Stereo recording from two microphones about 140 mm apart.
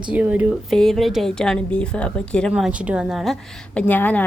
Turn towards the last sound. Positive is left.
turn(degrees=10)  # may be behind; listen again after turning